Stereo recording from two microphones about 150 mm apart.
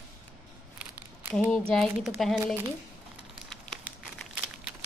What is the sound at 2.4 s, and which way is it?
Speech, 15° right (ahead or behind).